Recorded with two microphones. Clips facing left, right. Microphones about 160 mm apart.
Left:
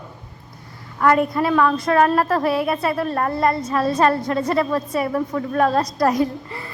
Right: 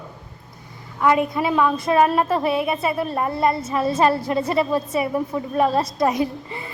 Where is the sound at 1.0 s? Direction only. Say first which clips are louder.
Left 2 dB; 5° right (ahead or behind).